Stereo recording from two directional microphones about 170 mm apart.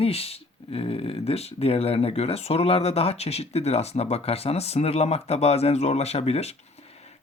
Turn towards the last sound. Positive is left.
turn(degrees=40)  # may be behind; listen again after turning